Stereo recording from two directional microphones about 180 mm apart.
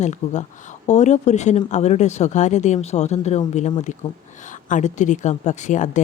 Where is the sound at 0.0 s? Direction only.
40° left (ahead or behind).